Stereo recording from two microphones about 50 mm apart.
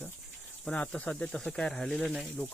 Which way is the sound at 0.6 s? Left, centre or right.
Left.